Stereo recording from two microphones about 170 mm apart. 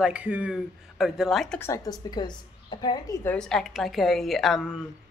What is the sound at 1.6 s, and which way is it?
A woman's voice, 20° left (ahead or behind).